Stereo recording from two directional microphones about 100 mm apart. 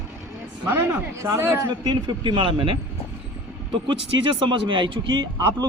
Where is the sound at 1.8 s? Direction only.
45° right (ahead or behind).